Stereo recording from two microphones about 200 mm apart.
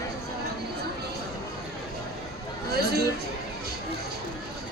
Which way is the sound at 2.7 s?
50° right (ahead or behind).